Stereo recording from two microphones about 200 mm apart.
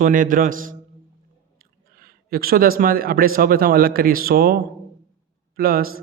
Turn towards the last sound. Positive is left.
turn(degrees=-45)  # may be behind; listen again after turning